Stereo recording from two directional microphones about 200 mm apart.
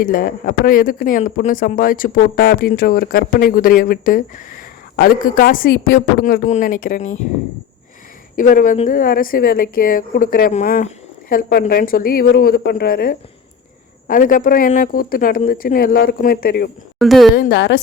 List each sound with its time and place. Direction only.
0.0 s speech: 45° left (ahead or behind)
8.4 s speech: 45° left (ahead or behind)
17.0 s speech: centre (ahead or behind)
17.5 s a woman's voice: 60° left (ahead or behind)